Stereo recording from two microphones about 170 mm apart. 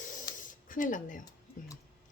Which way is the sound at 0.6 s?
50° left (ahead or behind).